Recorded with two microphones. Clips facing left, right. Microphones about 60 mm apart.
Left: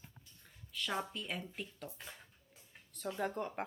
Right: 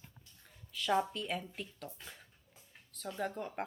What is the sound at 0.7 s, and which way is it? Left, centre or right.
Speech, centre.